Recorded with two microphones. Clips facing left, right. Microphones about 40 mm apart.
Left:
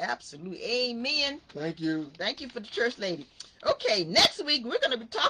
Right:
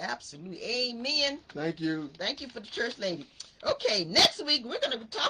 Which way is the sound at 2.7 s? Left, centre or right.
Left.